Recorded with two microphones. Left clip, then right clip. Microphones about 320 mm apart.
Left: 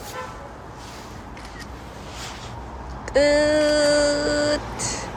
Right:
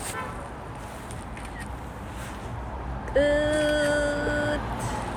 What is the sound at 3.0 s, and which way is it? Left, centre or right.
Female singing, centre.